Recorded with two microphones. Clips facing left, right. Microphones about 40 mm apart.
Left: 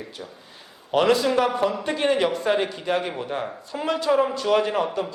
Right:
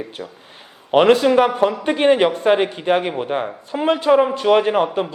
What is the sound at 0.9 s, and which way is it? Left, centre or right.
A man's voice, right.